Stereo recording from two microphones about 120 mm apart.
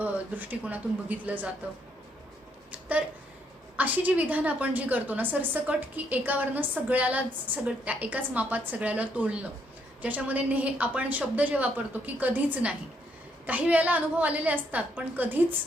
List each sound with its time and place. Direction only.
0.0 s a woman's voice: 15° right (ahead or behind)
3.8 s a woman's voice: 15° right (ahead or behind)